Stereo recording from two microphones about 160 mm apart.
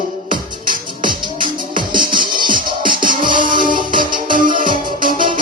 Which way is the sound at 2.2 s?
60° right (ahead or behind).